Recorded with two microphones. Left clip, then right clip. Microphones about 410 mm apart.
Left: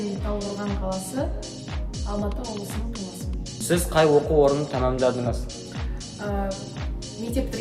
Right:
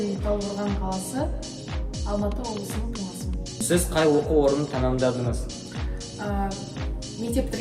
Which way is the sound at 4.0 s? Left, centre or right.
Centre.